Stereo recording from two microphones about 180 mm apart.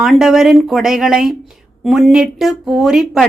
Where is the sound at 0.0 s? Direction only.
Centre (ahead or behind).